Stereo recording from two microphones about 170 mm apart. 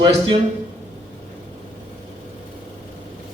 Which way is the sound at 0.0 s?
30° right (ahead or behind).